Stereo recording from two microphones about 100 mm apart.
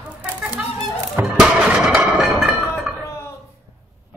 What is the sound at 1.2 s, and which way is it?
Music, 10° right (ahead or behind).